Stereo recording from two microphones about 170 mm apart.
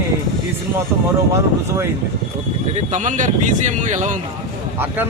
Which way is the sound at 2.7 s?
45° right (ahead or behind).